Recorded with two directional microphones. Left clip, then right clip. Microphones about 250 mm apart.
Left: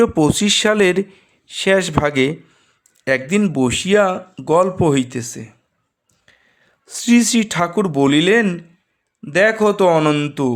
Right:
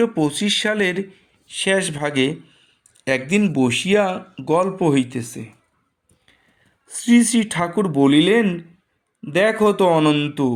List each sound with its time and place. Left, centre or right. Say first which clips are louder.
0.0 s speech: left 5 dB; left
6.8 s speech: left 2 dB; left